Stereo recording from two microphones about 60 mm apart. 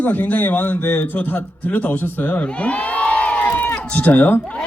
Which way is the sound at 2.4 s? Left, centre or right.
Centre.